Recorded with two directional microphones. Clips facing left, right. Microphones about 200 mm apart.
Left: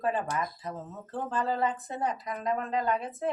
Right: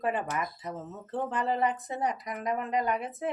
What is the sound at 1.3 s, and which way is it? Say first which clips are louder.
A woman's voice: even; 20° right (ahead or behind).